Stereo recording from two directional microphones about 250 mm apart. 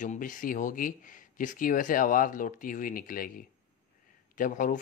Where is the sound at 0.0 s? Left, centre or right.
Left.